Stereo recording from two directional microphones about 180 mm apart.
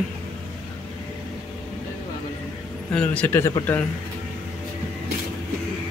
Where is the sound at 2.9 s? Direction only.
10° left (ahead or behind).